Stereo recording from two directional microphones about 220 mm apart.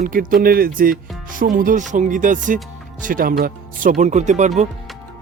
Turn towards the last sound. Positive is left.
turn(degrees=-30)  # may be behind; listen again after turning